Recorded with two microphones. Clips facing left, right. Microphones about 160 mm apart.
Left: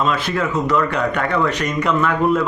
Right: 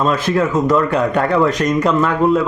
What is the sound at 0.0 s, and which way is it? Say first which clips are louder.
Speech: right 4 dB; 40° right (ahead or behind).